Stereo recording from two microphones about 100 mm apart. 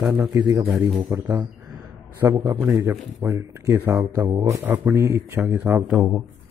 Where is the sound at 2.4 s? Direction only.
30° right (ahead or behind).